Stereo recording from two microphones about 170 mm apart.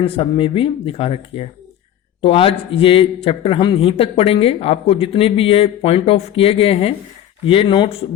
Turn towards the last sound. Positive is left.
turn(degrees=30)  # may be behind; listen again after turning